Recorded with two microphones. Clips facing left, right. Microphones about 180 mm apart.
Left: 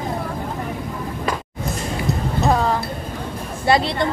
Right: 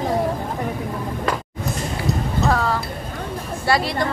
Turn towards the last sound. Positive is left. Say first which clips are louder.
# left 2 dB
turn(degrees=25)  # may be behind; listen again after turning